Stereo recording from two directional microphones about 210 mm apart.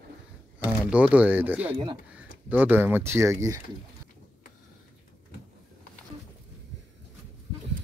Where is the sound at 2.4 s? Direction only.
5° right (ahead or behind).